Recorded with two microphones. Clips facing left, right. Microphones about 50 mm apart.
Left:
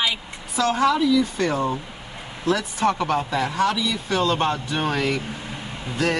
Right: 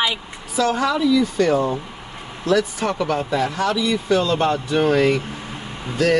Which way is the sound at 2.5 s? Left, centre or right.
Left.